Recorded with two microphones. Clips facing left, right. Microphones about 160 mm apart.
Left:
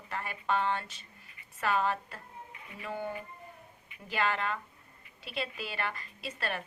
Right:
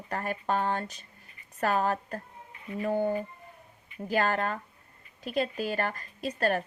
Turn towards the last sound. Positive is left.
turn(degrees=-40)  # may be behind; listen again after turning